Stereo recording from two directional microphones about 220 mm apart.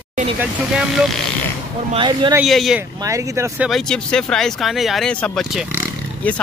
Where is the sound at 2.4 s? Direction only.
Centre (ahead or behind).